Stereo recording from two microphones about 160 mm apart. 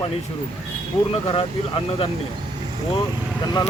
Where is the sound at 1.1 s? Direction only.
35° left (ahead or behind).